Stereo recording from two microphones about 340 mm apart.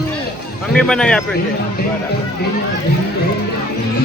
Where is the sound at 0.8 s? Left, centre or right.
Centre.